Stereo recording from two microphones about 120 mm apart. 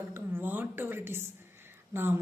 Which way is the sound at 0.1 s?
15° right (ahead or behind).